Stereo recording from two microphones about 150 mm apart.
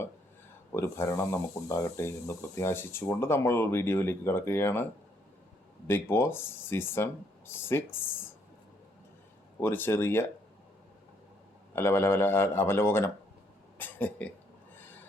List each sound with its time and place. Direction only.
0.7 s speech: 15° left (ahead or behind)
5.9 s speech: 15° left (ahead or behind)
9.6 s speech: 15° left (ahead or behind)
11.7 s speech: 15° left (ahead or behind)